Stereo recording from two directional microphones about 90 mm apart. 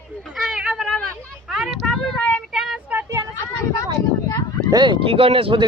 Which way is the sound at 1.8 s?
5° left (ahead or behind).